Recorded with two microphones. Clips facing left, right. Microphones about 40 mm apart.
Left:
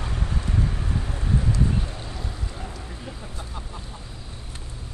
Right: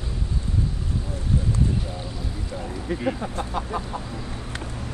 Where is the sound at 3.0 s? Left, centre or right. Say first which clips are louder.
Right 11 dB; right.